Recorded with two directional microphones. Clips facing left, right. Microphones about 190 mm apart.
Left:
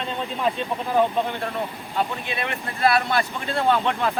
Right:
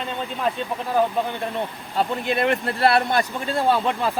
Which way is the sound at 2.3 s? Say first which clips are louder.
Right 8 dB; 45° right (ahead or behind).